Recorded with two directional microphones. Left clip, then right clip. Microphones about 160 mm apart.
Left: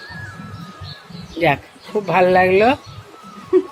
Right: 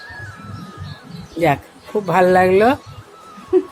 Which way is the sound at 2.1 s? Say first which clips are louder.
Even; 15° right (ahead or behind).